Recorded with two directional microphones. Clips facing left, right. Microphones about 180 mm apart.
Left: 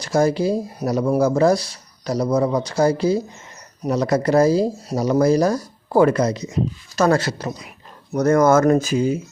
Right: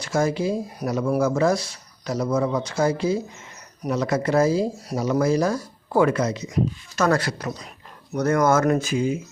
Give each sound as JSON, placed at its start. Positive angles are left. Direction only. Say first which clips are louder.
{"t": 0.0, "sound": "speech", "louder": "left 4 dB", "side_deg": 35}
{"t": 8.1, "sound": "speech", "louder": "left 5 dB", "side_deg": 40}